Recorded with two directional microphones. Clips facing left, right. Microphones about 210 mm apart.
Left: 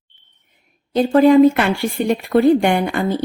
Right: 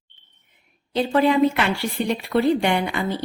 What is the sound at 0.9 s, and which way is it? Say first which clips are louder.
Speech: left 8 dB; 45° left (ahead or behind).